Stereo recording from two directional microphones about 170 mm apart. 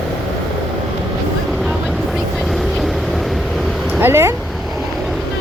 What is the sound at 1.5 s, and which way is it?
Vehicle, centre (ahead or behind).